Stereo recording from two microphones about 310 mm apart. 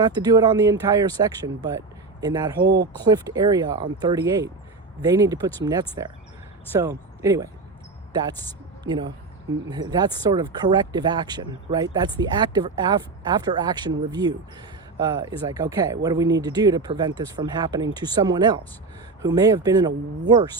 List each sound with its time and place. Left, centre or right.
0.0 s speech: centre
2.6 s speech: right
3.0 s a woman's voice: centre